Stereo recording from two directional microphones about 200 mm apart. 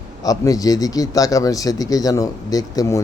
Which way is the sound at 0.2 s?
15° left (ahead or behind).